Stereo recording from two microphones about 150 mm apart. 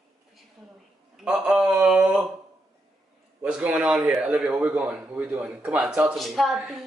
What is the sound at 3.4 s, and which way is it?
A woman's voice, 5° right (ahead or behind).